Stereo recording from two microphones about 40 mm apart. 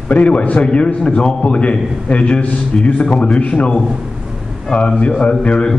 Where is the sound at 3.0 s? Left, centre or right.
Centre.